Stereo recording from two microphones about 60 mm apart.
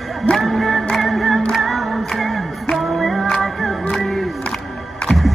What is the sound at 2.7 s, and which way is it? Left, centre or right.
Music, centre.